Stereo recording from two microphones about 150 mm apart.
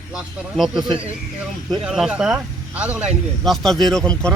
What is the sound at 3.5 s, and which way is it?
Speech, centre (ahead or behind).